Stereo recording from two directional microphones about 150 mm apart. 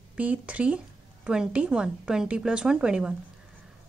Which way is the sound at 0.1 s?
10° right (ahead or behind).